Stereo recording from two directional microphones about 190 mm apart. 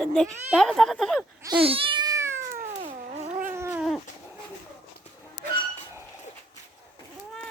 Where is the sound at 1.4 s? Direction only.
30° right (ahead or behind).